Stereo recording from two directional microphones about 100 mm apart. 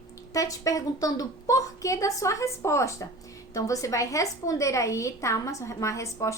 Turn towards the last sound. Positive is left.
turn(degrees=30)  # may be behind; listen again after turning